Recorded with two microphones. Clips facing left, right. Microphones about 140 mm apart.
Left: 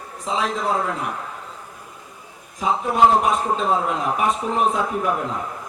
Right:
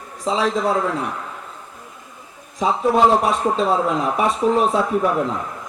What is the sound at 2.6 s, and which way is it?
Speech, 35° right (ahead or behind).